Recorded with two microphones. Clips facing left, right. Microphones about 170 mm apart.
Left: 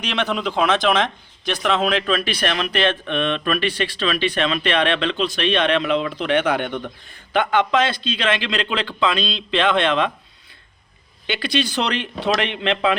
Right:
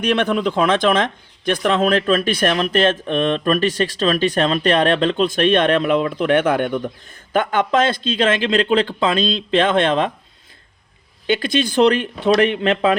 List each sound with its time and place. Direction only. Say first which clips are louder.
0.0 s speech: right 5 dB; 55° right (ahead or behind)
11.3 s speech: right 4 dB; 45° right (ahead or behind)